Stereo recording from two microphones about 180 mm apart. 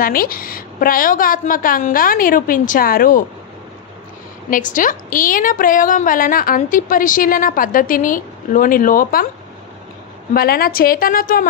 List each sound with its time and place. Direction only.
0.0 s a woman's voice: 55° left (ahead or behind)
4.5 s a woman's voice: 50° left (ahead or behind)
10.3 s a woman's voice: 55° left (ahead or behind)